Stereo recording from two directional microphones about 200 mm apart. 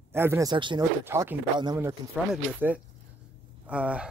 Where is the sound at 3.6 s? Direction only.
5° right (ahead or behind).